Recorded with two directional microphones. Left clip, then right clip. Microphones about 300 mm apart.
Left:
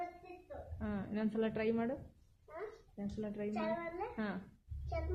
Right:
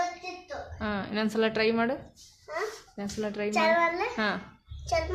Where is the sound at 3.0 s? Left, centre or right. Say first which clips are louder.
Right 10 dB; centre.